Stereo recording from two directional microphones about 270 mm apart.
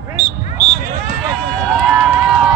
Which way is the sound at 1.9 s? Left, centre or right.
Centre.